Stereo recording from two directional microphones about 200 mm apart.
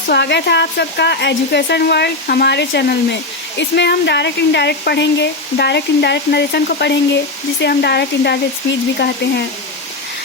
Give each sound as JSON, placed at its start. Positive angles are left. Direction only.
{"t": 0.1, "sound": "speech", "side_deg": 60}